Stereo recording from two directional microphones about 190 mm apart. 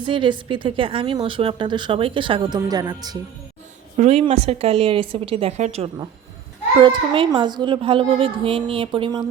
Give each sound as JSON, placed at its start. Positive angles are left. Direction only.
{"t": 0.0, "sound": "a woman's voice", "side_deg": -25}
{"t": 3.9, "sound": "a woman's voice", "side_deg": -35}